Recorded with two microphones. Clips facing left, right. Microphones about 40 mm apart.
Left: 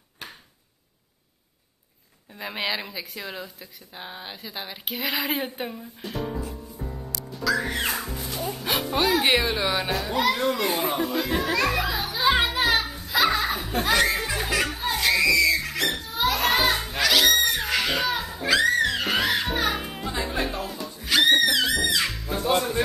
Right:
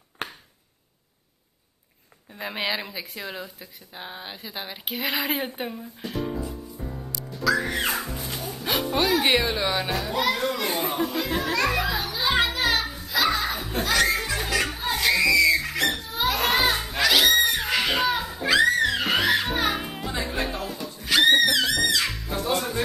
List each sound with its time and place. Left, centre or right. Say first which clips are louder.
0.2 s a sound: right 6 dB; right
2.3 s speech: right 1 dB; centre
7.4 s music: right 1 dB; centre